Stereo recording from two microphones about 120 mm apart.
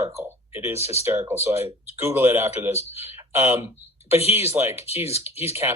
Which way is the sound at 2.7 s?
60° left (ahead or behind).